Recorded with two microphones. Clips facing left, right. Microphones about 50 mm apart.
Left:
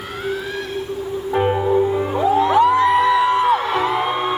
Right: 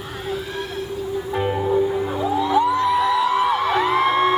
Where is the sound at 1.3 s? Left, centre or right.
Centre.